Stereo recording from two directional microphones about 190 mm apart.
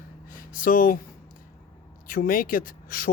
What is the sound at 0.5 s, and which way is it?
Speech, 45° left (ahead or behind).